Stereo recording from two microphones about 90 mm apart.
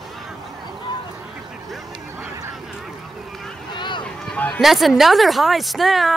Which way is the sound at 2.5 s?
5° right (ahead or behind).